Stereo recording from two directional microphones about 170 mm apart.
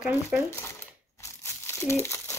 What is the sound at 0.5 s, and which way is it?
Crumpling, 15° left (ahead or behind).